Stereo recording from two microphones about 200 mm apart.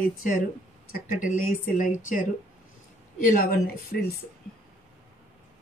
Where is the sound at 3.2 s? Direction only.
45° left (ahead or behind).